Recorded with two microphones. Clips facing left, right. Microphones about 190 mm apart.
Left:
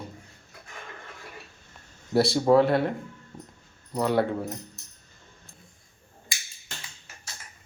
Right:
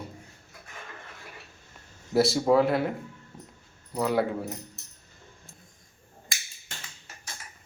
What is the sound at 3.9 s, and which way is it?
Speech, centre (ahead or behind).